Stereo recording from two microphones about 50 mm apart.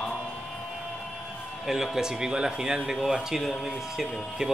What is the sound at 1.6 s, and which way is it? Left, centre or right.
A man's voice, centre.